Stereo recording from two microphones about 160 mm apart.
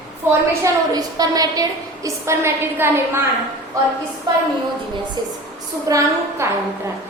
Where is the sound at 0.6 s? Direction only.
25° right (ahead or behind).